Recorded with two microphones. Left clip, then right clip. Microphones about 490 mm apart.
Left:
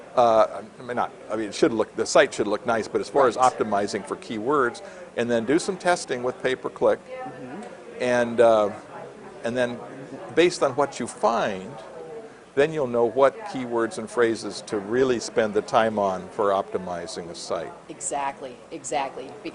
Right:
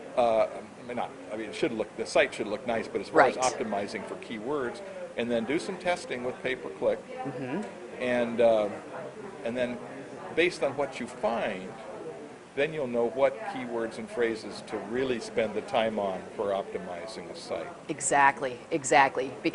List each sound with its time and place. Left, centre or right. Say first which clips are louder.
0.2 s speech: left 7 dB; left
10.3 s speech: left 7 dB; left
12.5 s speech: left 7 dB; left
17.8 s a woman's voice: right 10 dB; right